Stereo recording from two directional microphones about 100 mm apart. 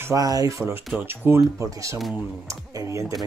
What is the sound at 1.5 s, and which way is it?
Speech, 35° right (ahead or behind).